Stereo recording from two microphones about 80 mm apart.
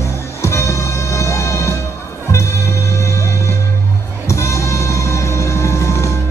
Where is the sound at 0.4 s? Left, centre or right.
Left.